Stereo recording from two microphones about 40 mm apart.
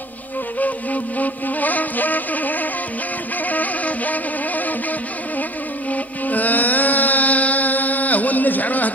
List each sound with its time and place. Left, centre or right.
0.6 s music: left
5.9 s music: left